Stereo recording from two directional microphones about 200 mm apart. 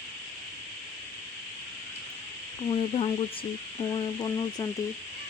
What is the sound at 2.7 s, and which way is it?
Speech, 30° left (ahead or behind).